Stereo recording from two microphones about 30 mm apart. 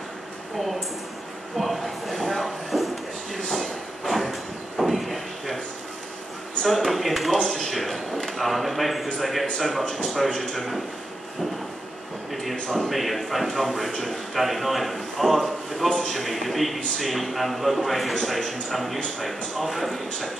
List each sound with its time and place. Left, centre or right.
1.6 s a sound: centre
3.5 s train: centre
6.6 s a man's voice: centre
7.7 s a sound: centre
8.4 s a man's voice: centre
10.1 s a man's voice: centre
10.5 s a man's voice: centre
12.9 s a man's voice: centre